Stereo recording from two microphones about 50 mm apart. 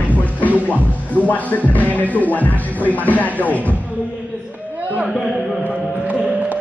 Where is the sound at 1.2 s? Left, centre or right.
Left.